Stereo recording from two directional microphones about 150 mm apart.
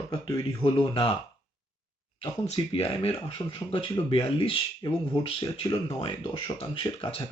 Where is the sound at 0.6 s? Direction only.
35° left (ahead or behind).